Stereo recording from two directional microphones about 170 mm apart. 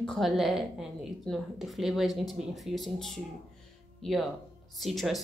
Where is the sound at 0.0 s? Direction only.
Centre (ahead or behind).